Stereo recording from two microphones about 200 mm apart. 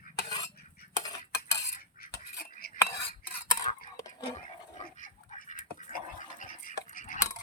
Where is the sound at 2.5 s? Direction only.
50° left (ahead or behind).